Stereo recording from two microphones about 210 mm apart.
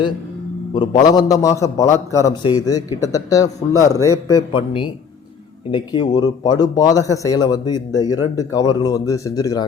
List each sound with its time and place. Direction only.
0.7 s a man's voice: 20° left (ahead or behind)
4.5 s a man's voice: 25° left (ahead or behind)